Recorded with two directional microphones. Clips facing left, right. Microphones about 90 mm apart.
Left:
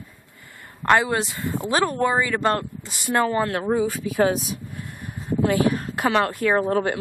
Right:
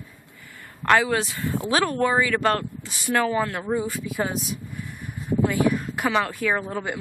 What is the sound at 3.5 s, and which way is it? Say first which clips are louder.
Speech: left 4 dB; 70° left (ahead or behind).